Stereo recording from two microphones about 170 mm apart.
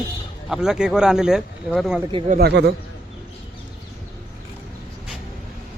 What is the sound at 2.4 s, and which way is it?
Speech, 75° right (ahead or behind).